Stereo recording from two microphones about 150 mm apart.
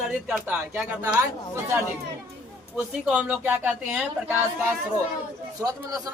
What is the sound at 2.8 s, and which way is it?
Speech, 10° right (ahead or behind).